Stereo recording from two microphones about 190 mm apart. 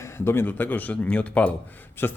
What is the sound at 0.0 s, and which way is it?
Speech, 10° left (ahead or behind).